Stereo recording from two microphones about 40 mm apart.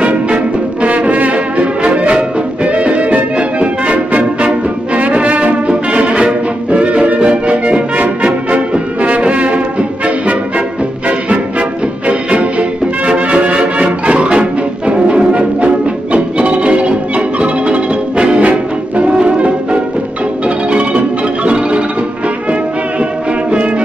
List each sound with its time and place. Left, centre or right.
0.8 s brass instrument: right
6.7 s music: right
7.9 s music: right
18.4 s brass instrument: right
19.2 s music: right
20.4 s marimba: right
21.5 s music: right